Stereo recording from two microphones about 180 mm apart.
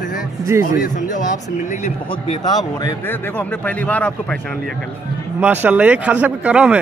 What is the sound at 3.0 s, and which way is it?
A man's voice, 10° left (ahead or behind).